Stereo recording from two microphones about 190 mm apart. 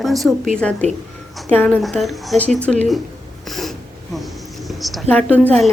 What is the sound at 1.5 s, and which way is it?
A woman's voice, 10° left (ahead or behind).